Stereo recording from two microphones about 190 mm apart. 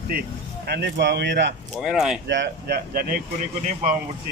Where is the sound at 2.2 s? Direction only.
60° right (ahead or behind).